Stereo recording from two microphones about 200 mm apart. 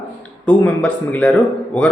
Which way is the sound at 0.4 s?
5° left (ahead or behind).